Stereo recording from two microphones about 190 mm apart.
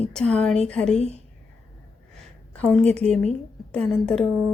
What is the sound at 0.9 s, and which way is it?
Speech, 35° left (ahead or behind).